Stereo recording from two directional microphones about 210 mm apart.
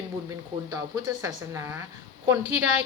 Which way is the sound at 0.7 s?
15° right (ahead or behind).